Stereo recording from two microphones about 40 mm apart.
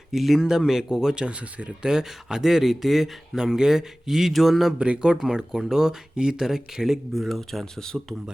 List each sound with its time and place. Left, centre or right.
0.1 s speech: centre; by 1.7 s right
1.8 s speech: centre
4.8 s speech: right
7.1 s speech: centre